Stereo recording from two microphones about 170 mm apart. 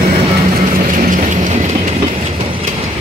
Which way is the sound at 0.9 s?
50° right (ahead or behind).